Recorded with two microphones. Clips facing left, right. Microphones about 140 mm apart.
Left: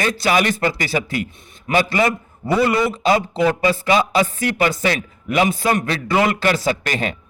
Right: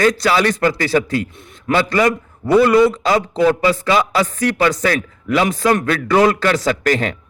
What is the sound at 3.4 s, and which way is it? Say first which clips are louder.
Speech: right 3 dB; 20° left (ahead or behind).